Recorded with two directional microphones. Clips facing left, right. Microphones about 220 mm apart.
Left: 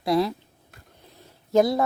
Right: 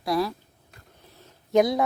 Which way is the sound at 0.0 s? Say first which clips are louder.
Left 3 dB; 25° left (ahead or behind).